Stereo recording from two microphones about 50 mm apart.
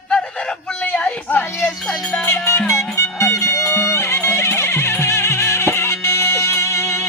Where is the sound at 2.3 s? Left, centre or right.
Left.